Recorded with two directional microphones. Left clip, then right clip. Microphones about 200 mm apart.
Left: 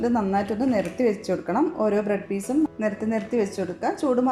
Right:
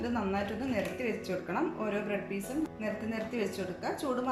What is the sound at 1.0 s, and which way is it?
Speech, 30° left (ahead or behind).